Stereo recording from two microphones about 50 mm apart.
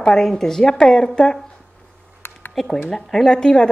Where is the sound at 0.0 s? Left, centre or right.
Centre.